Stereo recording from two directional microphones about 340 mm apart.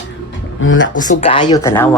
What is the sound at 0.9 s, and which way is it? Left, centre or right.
Speech, centre.